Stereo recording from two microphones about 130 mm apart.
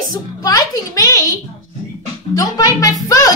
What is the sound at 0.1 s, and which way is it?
A woman's voice, 30° left (ahead or behind).